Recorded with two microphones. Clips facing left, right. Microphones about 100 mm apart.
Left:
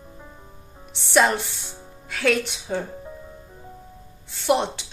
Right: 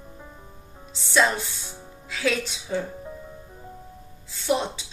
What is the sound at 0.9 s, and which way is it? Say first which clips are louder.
Speech: left 3 dB; 60° left (ahead or behind).